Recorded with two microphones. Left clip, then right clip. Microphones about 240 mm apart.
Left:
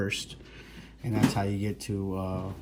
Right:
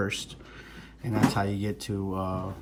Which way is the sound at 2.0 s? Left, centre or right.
Left.